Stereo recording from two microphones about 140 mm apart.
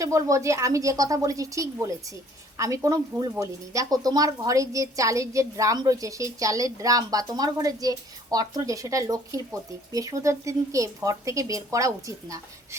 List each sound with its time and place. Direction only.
0.0 s speech: 25° right (ahead or behind)